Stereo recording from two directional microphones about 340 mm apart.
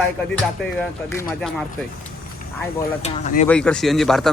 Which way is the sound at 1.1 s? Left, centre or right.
Centre.